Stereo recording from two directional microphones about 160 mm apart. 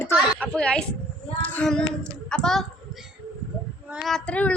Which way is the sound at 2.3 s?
5° left (ahead or behind).